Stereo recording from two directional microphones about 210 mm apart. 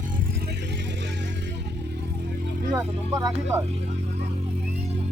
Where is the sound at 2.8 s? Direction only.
15° right (ahead or behind).